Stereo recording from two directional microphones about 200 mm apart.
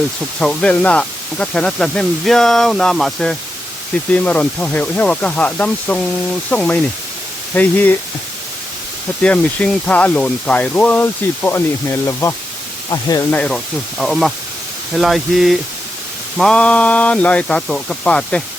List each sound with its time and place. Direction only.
0.3 s speech: 5° left (ahead or behind)
9.2 s speech: 5° left (ahead or behind)
14.0 s speech: centre (ahead or behind)